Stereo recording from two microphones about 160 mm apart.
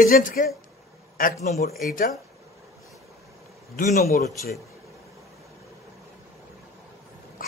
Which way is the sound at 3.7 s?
60° left (ahead or behind).